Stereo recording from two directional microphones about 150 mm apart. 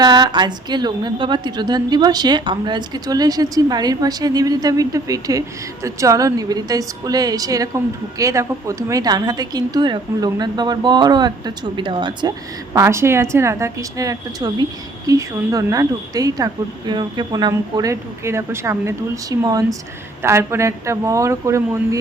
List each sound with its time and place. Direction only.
0.0 s a woman's voice: 30° right (ahead or behind)
12.7 s a woman's voice: 20° right (ahead or behind)